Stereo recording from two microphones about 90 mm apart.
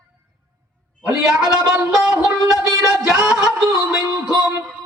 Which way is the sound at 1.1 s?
5° right (ahead or behind).